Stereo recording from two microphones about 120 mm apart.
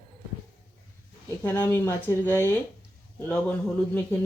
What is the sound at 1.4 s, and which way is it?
Speech, 15° left (ahead or behind).